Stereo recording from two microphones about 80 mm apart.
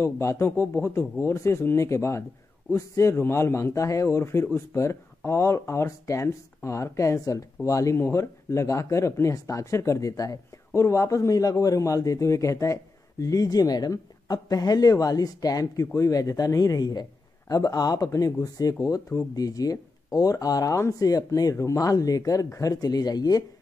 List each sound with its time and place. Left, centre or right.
0.0 s a man's voice: left